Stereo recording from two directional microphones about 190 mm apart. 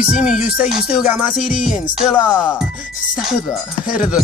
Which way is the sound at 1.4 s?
40° left (ahead or behind).